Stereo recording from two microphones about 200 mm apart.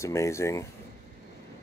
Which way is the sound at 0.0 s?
15° left (ahead or behind).